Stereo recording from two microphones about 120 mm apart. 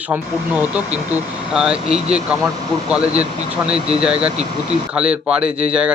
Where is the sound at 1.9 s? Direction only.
60° right (ahead or behind).